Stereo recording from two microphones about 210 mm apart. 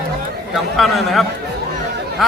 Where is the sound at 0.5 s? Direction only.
Centre (ahead or behind).